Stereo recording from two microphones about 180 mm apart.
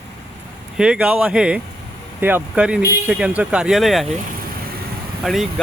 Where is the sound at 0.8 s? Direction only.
5° right (ahead or behind).